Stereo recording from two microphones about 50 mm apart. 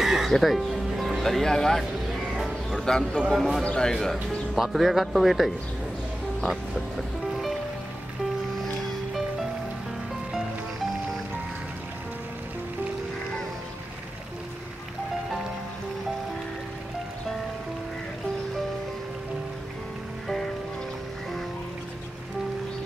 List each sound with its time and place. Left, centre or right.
0.0 s music: centre
2.8 s speech: centre
3.2 s speech: centre
3.6 s speech: centre
3.9 s speech: centre